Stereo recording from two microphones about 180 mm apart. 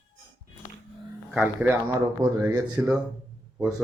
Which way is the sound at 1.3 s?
10° right (ahead or behind).